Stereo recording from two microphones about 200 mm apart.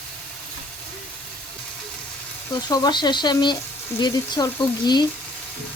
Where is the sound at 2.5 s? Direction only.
20° left (ahead or behind).